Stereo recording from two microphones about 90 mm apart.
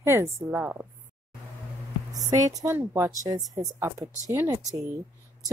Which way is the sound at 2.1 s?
40° right (ahead or behind).